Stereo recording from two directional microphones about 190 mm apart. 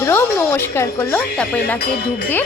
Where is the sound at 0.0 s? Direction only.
10° left (ahead or behind).